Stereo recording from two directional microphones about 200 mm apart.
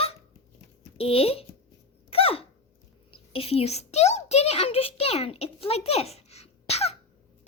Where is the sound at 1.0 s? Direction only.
30° left (ahead or behind).